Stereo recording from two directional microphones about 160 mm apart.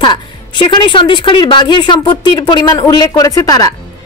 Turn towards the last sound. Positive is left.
turn(degrees=20)  # may be behind; listen again after turning